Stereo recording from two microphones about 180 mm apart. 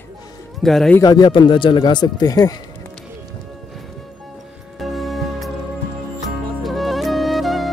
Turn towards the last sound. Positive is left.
turn(degrees=0)  # may be behind; listen again after turning